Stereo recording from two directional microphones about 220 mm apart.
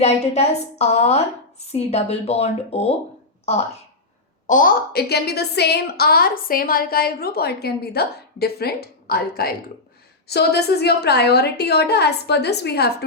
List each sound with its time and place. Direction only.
0.0 s a woman's voice: 30° left (ahead or behind)
4.4 s a woman's voice: 40° left (ahead or behind)